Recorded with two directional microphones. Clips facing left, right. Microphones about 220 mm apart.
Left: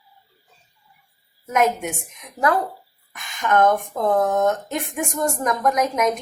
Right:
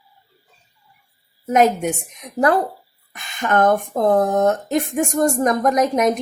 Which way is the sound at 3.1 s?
30° right (ahead or behind).